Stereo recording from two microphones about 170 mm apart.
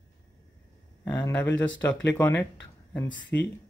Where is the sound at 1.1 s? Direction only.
10° left (ahead or behind).